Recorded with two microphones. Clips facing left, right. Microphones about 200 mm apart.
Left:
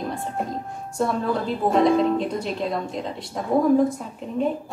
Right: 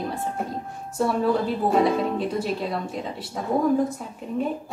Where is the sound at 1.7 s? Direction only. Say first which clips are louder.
Left 4 dB; 5° right (ahead or behind).